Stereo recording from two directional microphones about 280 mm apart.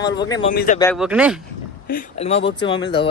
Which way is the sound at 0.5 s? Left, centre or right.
Left.